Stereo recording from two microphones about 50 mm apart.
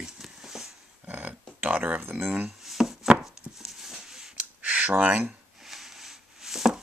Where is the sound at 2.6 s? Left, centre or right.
Centre.